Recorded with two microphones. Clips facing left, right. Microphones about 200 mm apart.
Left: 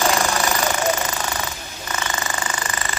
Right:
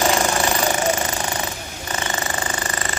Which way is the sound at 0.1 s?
25° right (ahead or behind).